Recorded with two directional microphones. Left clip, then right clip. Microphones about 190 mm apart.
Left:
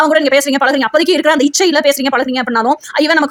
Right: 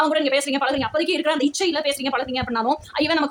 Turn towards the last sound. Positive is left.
turn(degrees=40)  # may be behind; listen again after turning